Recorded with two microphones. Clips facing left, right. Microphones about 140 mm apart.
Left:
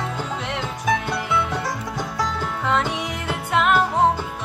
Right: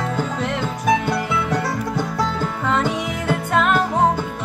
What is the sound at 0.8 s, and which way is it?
Music, centre (ahead or behind).